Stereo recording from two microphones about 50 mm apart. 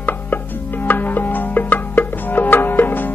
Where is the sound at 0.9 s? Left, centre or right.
Left.